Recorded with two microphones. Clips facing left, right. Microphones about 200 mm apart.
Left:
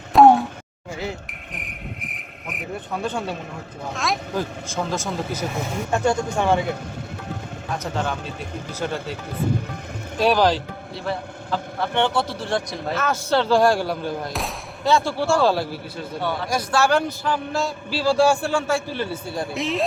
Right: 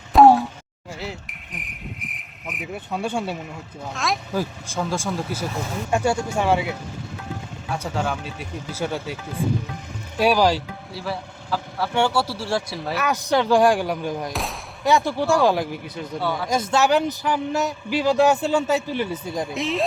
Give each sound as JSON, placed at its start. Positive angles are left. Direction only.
{"t": 0.1, "sound": "a sound", "side_deg": 0}
{"t": 0.9, "sound": "speech", "side_deg": 0}
{"t": 3.1, "sound": "speech", "side_deg": -10}
{"t": 3.9, "sound": "speech", "side_deg": 0}
{"t": 4.9, "sound": "speech", "side_deg": -10}
{"t": 7.7, "sound": "speech", "side_deg": -10}
{"t": 10.2, "sound": "a man's voice", "side_deg": -10}
{"t": 19.5, "sound": "speech", "side_deg": 0}